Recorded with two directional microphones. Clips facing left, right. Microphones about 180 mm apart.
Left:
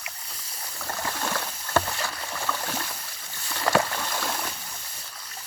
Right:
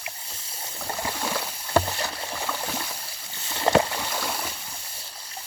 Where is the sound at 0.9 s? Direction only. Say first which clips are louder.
Right 1 dB; 10° right (ahead or behind).